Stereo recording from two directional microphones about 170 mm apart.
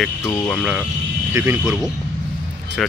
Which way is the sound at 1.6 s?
Centre (ahead or behind).